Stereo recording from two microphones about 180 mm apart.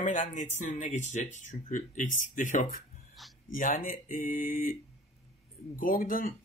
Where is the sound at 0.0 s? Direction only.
45° left (ahead or behind).